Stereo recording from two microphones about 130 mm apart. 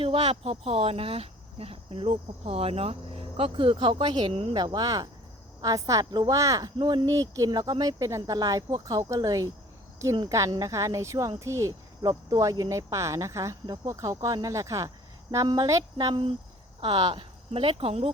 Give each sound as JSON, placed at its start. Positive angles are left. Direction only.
{"t": 0.0, "sound": "speech", "side_deg": -45}
{"t": 4.3, "sound": "speech", "side_deg": -50}
{"t": 4.5, "sound": "speech", "side_deg": -30}
{"t": 16.8, "sound": "speech", "side_deg": -45}